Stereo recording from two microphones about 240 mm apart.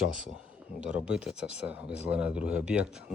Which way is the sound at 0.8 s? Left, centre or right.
Centre.